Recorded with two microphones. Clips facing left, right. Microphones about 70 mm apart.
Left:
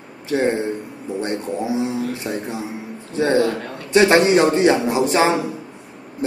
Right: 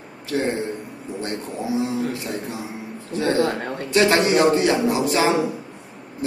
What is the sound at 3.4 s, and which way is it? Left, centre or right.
Speech, right.